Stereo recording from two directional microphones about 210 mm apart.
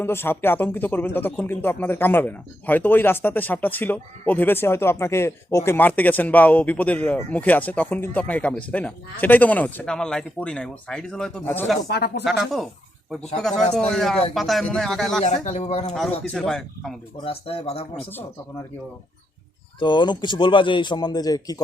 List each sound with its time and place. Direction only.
0.0 s speech: 10° left (ahead or behind)
11.9 s speech: 50° left (ahead or behind)
12.2 s speech: centre (ahead or behind)
15.4 s speech: 30° left (ahead or behind)
16.2 s speech: centre (ahead or behind)
17.2 s a man's voice: 25° left (ahead or behind)
19.8 s a man's voice: 20° left (ahead or behind)